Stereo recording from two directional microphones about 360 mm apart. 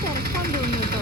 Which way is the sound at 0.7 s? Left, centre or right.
Right.